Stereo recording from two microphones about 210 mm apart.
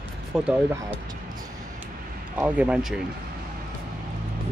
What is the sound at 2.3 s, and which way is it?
Speech, 5° right (ahead or behind).